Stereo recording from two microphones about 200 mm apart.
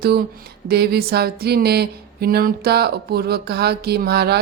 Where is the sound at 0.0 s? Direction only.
50° right (ahead or behind).